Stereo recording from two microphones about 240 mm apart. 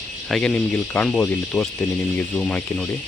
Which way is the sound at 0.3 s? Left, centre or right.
Centre.